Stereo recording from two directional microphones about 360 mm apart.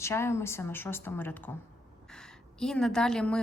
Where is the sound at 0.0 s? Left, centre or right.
Centre.